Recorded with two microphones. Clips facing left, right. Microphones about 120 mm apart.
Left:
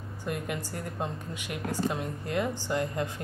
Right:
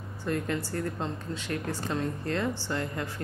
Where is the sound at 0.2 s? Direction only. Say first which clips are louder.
Right 3 dB; 15° left (ahead or behind).